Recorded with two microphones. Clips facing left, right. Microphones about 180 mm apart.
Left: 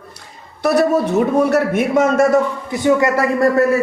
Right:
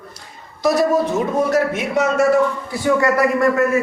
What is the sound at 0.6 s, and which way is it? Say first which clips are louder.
A man's voice: left 1 dB; 65° left (ahead or behind).